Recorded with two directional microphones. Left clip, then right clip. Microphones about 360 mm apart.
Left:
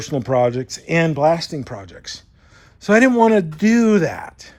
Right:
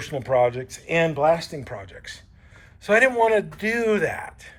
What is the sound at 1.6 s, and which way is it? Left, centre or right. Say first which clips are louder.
A man's voice: left 3 dB; centre.